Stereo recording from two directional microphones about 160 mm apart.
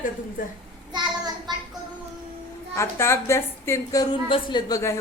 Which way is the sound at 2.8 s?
15° left (ahead or behind).